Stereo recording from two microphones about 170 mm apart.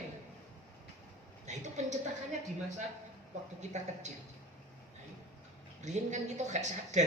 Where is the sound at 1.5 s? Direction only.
45° right (ahead or behind).